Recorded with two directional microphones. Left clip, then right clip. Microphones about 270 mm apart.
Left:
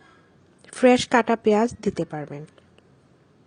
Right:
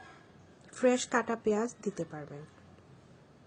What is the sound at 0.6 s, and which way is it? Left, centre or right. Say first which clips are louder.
A woman's voice: left 11 dB; left.